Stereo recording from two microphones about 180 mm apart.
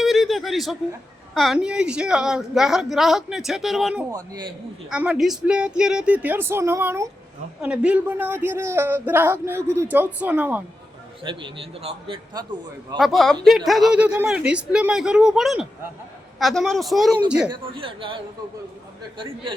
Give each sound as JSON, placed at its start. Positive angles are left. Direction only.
{"t": 0.0, "sound": "chuckle", "side_deg": 0}
{"t": 1.3, "sound": "a woman's voice", "side_deg": 0}
{"t": 4.1, "sound": "a man's voice", "side_deg": -20}
{"t": 4.9, "sound": "a man's voice", "side_deg": -5}
{"t": 11.2, "sound": "a man's voice", "side_deg": -30}
{"t": 13.0, "sound": "a woman's voice", "side_deg": 0}
{"t": 17.5, "sound": "a man's voice", "side_deg": -30}